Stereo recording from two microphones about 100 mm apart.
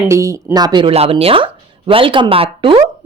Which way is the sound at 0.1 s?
30° right (ahead or behind).